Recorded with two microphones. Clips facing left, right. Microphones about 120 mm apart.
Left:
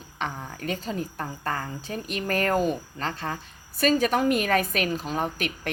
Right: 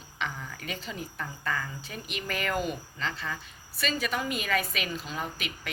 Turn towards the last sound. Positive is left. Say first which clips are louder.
# left 7 dB
turn(degrees=50)  # may be behind; listen again after turning